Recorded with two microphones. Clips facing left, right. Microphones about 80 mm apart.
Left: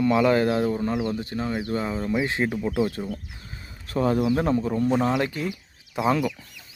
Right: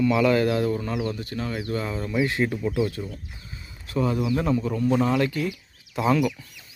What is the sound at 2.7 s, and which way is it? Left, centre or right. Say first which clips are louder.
Speech: left 1 dB; left.